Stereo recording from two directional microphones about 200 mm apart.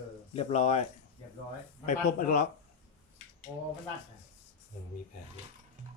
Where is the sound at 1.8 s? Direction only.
40° left (ahead or behind).